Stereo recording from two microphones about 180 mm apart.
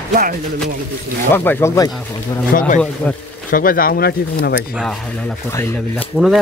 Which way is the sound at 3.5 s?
50° left (ahead or behind).